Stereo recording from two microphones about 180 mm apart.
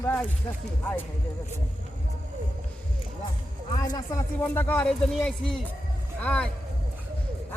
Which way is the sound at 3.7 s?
25° left (ahead or behind).